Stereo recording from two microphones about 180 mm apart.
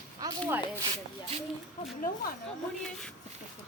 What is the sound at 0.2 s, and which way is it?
Speech, 15° right (ahead or behind).